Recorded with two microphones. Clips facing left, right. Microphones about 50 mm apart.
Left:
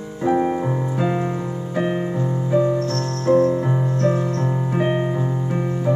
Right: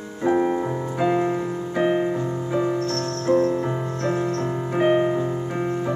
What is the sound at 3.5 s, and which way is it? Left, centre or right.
Music, centre.